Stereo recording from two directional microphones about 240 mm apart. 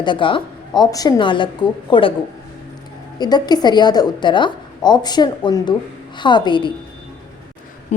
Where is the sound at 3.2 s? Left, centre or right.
Centre.